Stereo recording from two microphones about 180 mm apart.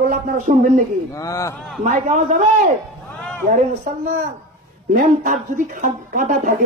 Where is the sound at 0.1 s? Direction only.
45° right (ahead or behind).